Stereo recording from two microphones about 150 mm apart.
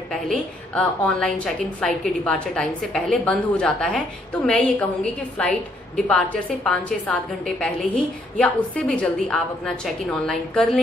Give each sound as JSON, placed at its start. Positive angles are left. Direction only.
{"t": 0.3, "sound": "a woman's voice", "side_deg": 5}